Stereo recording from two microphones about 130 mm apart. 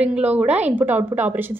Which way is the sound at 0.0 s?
10° right (ahead or behind).